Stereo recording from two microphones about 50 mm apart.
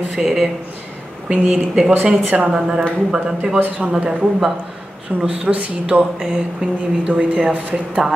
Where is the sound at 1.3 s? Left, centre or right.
Centre.